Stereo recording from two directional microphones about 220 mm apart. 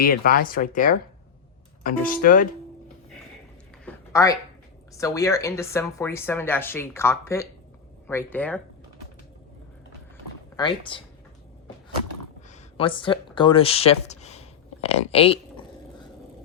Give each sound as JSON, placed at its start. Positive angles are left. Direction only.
{"t": 0.0, "sound": "speech", "side_deg": 40}
{"t": 3.8, "sound": "a sound", "side_deg": 15}
{"t": 4.9, "sound": "speech", "side_deg": 15}
{"t": 10.6, "sound": "speech", "side_deg": 20}
{"t": 12.5, "sound": "speech", "side_deg": 25}